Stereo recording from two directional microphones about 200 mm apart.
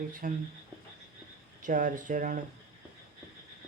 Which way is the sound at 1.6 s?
40° right (ahead or behind).